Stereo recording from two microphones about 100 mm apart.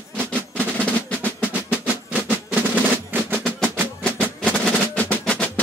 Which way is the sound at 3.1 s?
20° right (ahead or behind).